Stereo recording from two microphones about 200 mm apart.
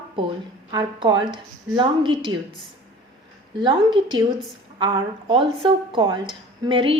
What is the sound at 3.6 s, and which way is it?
Speech, 20° right (ahead or behind).